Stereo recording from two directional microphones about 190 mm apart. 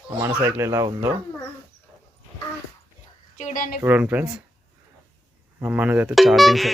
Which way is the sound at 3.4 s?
45° left (ahead or behind).